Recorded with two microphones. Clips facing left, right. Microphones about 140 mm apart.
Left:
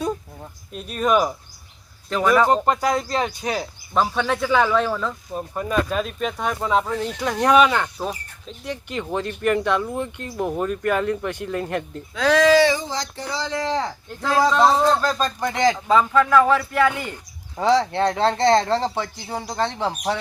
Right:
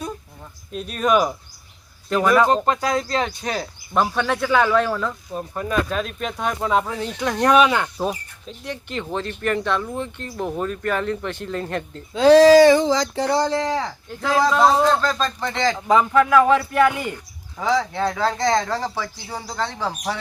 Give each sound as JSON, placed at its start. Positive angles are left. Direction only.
{"t": 0.7, "sound": "a man's voice", "side_deg": 5}
{"t": 3.9, "sound": "a man's voice", "side_deg": 0}
{"t": 8.6, "sound": "speech", "side_deg": 10}
{"t": 12.1, "sound": "speech", "side_deg": -30}
{"t": 12.7, "sound": "a sound", "side_deg": -90}
{"t": 13.8, "sound": "a man's voice", "side_deg": 0}
{"t": 15.0, "sound": "speech", "side_deg": 15}
{"t": 15.9, "sound": "speech", "side_deg": -15}
{"t": 17.6, "sound": "speech", "side_deg": 30}